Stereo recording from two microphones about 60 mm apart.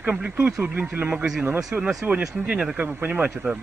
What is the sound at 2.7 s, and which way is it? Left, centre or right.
Speech, right.